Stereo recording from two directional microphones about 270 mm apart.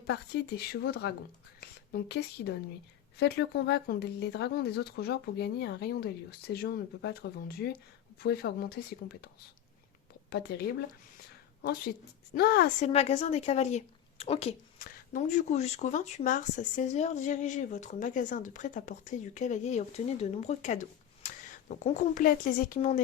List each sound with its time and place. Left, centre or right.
0.1 s a woman's voice: left